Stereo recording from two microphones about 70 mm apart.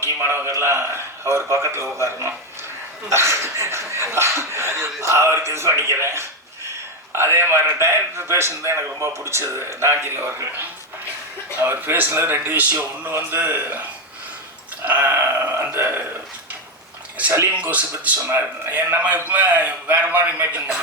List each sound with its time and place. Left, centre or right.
0.0 s a man's voice: right
11.6 s a man's voice: right
14.8 s a man's voice: right
17.6 s a man's voice: right